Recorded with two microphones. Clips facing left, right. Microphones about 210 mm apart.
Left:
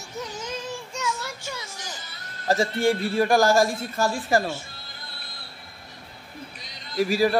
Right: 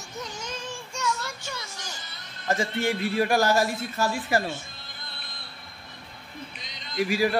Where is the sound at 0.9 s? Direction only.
10° left (ahead or behind).